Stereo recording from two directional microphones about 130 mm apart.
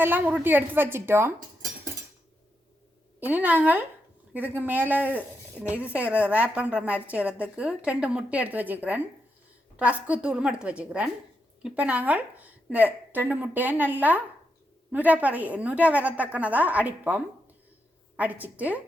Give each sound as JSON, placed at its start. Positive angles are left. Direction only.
{"t": 0.0, "sound": "speech", "side_deg": -10}
{"t": 3.2, "sound": "speech", "side_deg": -15}